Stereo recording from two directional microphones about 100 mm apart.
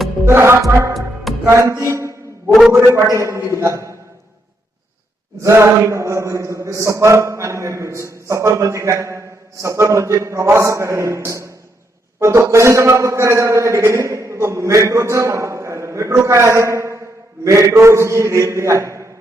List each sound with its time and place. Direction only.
0.3 s a man's voice: 25° right (ahead or behind)
1.5 s music: 30° right (ahead or behind)
2.5 s a man's voice: centre (ahead or behind)
2.7 s a man's voice: 25° right (ahead or behind)
5.4 s a man's voice: 30° right (ahead or behind)